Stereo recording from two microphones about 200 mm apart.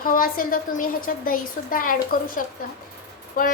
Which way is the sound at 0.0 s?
45° left (ahead or behind).